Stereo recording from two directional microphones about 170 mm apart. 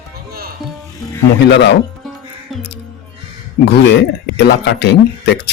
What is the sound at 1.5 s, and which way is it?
Speech, 90° left.